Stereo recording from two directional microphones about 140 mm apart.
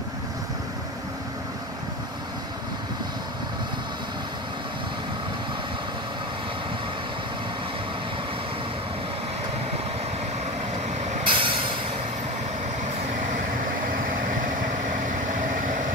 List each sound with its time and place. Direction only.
11.2 s vehicle: 40° right (ahead or behind)